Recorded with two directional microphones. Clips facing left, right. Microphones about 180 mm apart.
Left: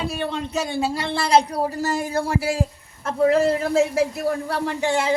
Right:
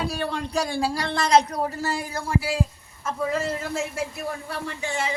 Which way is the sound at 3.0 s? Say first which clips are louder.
Left 8 dB; 60° left (ahead or behind).